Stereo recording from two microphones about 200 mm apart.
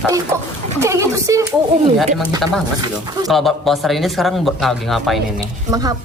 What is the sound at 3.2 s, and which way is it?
Speech, centre (ahead or behind).